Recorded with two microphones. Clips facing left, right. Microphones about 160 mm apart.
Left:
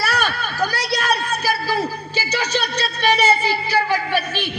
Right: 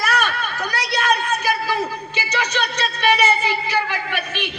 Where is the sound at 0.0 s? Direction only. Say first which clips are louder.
Even; 30° left (ahead or behind).